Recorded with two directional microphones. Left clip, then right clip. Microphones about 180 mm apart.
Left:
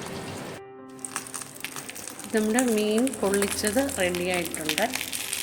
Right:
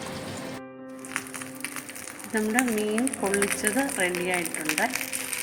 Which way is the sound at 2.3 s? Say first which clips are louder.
Left 2 dB; 25° left (ahead or behind).